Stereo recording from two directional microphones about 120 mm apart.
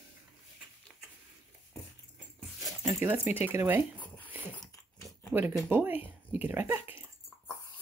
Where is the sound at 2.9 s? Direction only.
20° right (ahead or behind).